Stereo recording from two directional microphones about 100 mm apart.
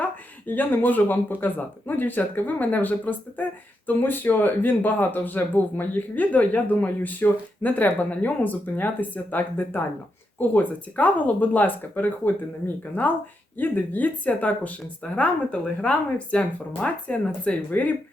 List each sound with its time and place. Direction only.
0.0 s speech: 15° left (ahead or behind)